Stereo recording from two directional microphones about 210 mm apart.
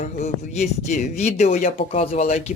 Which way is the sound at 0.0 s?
30° left (ahead or behind).